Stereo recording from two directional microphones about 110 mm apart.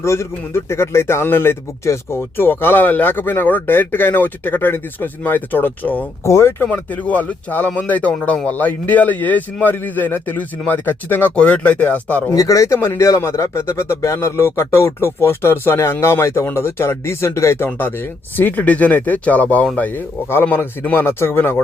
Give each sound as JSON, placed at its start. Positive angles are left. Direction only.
{"t": 0.0, "sound": "a man's voice", "side_deg": 25}
{"t": 12.3, "sound": "a man's voice", "side_deg": 30}